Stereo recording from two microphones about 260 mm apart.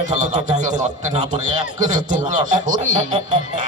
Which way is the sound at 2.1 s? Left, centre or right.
Right.